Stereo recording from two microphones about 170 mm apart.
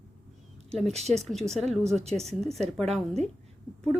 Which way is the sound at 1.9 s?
40° right (ahead or behind).